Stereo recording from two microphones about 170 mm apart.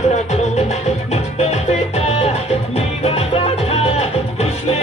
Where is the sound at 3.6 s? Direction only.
35° left (ahead or behind).